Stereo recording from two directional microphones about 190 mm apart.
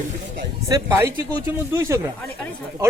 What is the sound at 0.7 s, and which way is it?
A man's voice, 15° right (ahead or behind).